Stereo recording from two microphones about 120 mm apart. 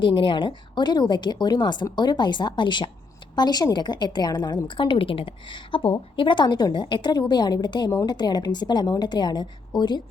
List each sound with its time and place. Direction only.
0.0 s a woman's voice: 45° left (ahead or behind)